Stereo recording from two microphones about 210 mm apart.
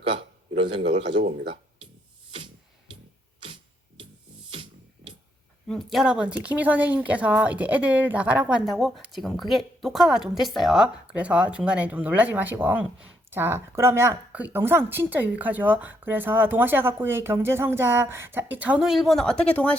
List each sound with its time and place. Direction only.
0.0 s speech: 25° right (ahead or behind)
5.6 s a woman's voice: centre (ahead or behind)